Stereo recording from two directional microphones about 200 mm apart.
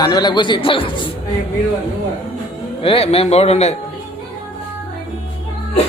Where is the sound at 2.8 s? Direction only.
30° left (ahead or behind).